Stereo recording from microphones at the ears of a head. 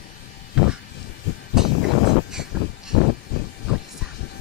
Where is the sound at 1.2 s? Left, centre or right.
Left.